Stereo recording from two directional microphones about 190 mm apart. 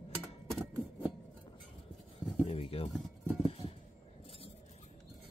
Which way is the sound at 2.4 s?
30° left (ahead or behind).